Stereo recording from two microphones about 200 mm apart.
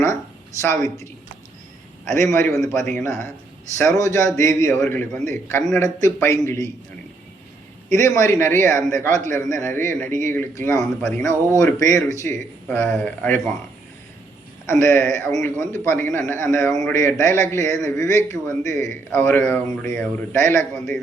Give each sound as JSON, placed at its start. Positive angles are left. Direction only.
{"t": 0.6, "sound": "speech", "side_deg": 15}
{"t": 2.1, "sound": "a man's voice", "side_deg": 10}
{"t": 3.8, "sound": "a man's voice", "side_deg": 15}
{"t": 7.9, "sound": "speech", "side_deg": 15}
{"t": 9.2, "sound": "a man's voice", "side_deg": -40}
{"t": 9.9, "sound": "speech", "side_deg": 10}
{"t": 10.8, "sound": "a man's voice", "side_deg": 0}
{"t": 11.2, "sound": "speech", "side_deg": 15}
{"t": 14.7, "sound": "speech", "side_deg": 15}
{"t": 20.7, "sound": "a man's voice", "side_deg": 0}